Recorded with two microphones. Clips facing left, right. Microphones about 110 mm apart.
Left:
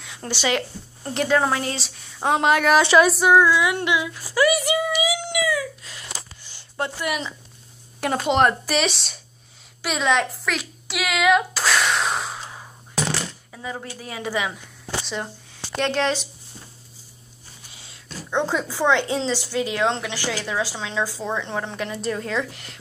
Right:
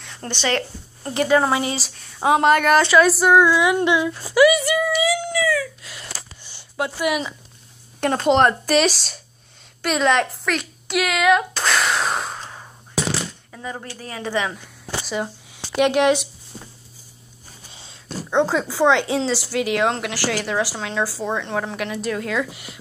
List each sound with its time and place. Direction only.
0.0 s a woman's voice: 5° left (ahead or behind)
1.1 s speech: centre (ahead or behind)
3.4 s a sound: 25° right (ahead or behind)
4.6 s child singing: 15° left (ahead or behind)
6.8 s a woman's voice: 10° right (ahead or behind)
8.0 s speech: 5° left (ahead or behind)
9.8 s a sound: centre (ahead or behind)
13.8 s a woman's voice: 10° left (ahead or behind)
15.0 s speech: 5° right (ahead or behind)
15.5 s a sound: 15° right (ahead or behind)
18.3 s a woman's voice: 15° right (ahead or behind)